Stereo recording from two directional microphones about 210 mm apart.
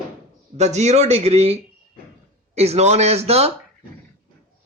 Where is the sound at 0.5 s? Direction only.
30° right (ahead or behind).